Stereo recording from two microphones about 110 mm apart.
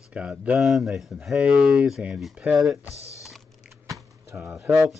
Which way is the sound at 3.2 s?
5° right (ahead or behind).